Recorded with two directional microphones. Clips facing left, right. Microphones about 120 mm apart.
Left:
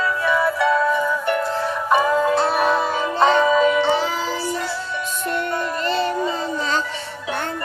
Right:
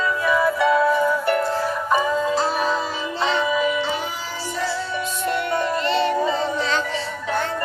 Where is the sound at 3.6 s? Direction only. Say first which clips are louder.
Left 5 dB; 70° left (ahead or behind).